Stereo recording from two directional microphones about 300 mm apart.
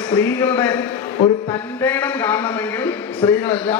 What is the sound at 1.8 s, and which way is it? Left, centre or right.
A man's voice, centre.